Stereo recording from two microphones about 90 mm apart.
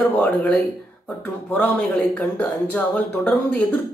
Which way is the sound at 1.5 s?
15° left (ahead or behind).